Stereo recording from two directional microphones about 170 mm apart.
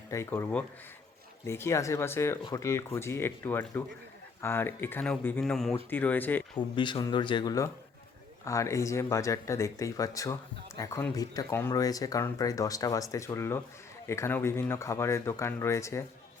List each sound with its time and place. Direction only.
0.1 s speech: 15° left (ahead or behind)
6.6 s speech: 30° left (ahead or behind)